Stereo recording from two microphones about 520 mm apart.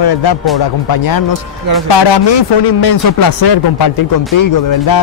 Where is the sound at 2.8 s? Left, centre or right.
Left.